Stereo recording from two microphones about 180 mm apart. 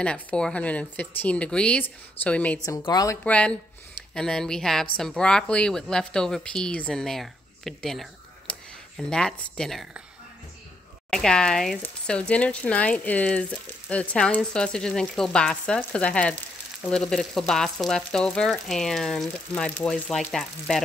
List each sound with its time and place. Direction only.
0.0 s speech: 5° left (ahead or behind)
2.8 s a woman's voice: 20° left (ahead or behind)
3.3 s speech: 5° left (ahead or behind)
11.1 s speech: 5° left (ahead or behind)